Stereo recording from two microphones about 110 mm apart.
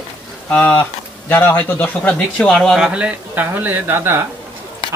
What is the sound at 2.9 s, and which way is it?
Speech, 10° right (ahead or behind).